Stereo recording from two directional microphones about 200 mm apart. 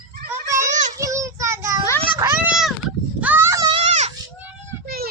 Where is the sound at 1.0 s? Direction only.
15° right (ahead or behind).